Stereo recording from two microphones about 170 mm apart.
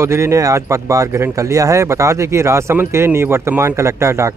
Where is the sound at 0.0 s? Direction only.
15° right (ahead or behind).